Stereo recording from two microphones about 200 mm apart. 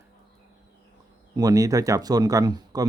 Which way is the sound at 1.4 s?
15° right (ahead or behind).